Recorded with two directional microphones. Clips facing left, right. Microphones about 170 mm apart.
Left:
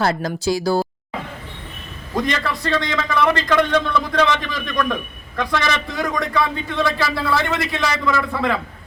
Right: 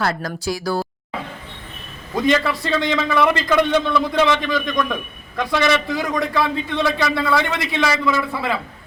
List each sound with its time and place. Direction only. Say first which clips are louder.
0.0 s speech: left 3 dB; 25° left (ahead or behind)
2.2 s a man's voice: right 8 dB; centre (ahead or behind)